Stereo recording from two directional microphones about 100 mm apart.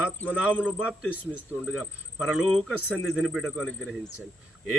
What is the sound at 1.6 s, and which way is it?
Speech, 5° right (ahead or behind).